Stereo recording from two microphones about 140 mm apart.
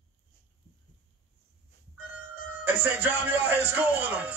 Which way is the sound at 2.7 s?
15° right (ahead or behind).